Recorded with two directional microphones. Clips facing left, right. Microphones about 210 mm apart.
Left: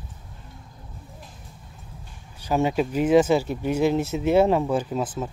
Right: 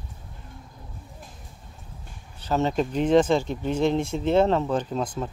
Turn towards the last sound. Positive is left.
turn(degrees=5)  # may be behind; listen again after turning